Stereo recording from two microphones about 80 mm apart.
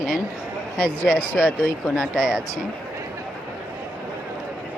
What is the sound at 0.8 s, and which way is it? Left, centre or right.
Speech, centre.